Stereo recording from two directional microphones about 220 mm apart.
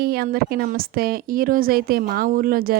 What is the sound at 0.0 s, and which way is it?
Speech, 45° right (ahead or behind).